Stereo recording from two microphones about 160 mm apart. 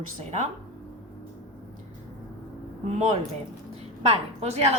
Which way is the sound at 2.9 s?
45° right (ahead or behind).